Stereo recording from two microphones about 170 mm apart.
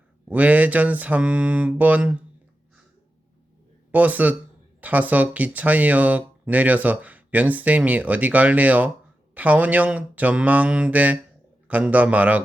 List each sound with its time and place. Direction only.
0.3 s speech: 10° right (ahead or behind)
3.9 s speech: 10° right (ahead or behind)